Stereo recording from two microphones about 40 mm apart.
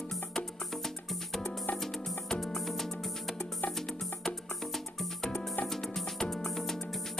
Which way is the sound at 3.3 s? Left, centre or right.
Left.